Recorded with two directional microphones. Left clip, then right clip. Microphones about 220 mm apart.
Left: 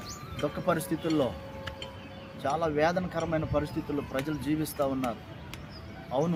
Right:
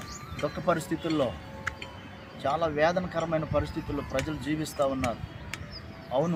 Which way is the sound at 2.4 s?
Centre (ahead or behind).